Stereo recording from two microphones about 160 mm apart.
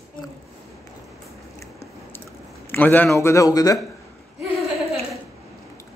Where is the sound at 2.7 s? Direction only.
10° left (ahead or behind).